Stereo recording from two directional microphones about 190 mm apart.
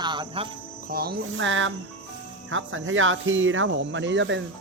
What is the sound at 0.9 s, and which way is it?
Cricket, 55° right (ahead or behind).